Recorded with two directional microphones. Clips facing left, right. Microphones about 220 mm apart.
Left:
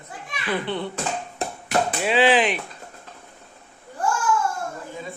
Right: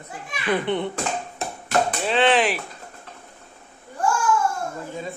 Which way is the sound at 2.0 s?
5° left (ahead or behind).